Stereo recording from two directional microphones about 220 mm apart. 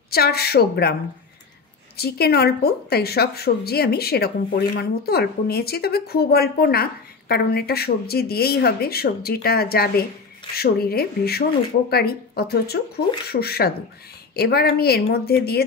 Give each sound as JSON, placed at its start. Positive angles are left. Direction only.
{"t": 0.1, "sound": "a woman's voice", "side_deg": 45}
{"t": 2.0, "sound": "a woman's voice", "side_deg": 45}